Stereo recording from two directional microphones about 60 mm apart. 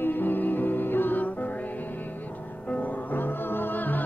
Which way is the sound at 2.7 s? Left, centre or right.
Left.